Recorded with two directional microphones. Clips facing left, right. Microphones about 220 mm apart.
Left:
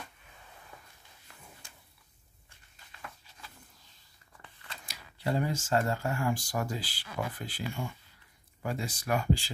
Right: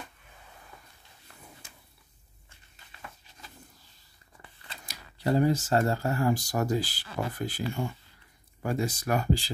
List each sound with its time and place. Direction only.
4.6 s speech: 40° right (ahead or behind)